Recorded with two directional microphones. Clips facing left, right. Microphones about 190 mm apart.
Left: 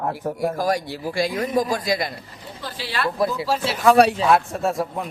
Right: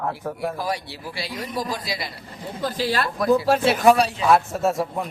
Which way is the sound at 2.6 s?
45° right (ahead or behind).